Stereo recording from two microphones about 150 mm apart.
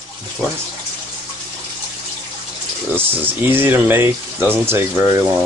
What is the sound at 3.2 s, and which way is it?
Speech, 15° right (ahead or behind).